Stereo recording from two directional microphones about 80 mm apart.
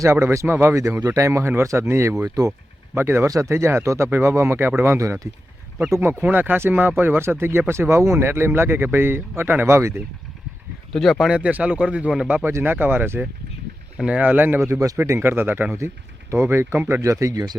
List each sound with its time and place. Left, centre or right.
0.0 s speech: right
3.2 s speech: right
3.5 s speech: right
6.2 s speech: right
10.9 s speech: centre
11.3 s speech: centre
12.5 s speech: right
14.7 s speech: right
16.7 s speech: centre
17.0 s speech: right